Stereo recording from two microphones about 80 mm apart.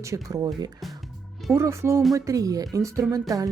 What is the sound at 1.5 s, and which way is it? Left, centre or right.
A woman's voice, right.